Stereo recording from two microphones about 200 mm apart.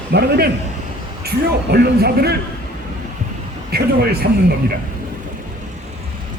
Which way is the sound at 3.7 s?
50° right (ahead or behind).